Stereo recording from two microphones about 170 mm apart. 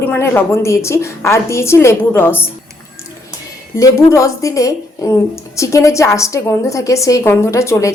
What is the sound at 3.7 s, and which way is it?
A woman's voice, 20° left (ahead or behind).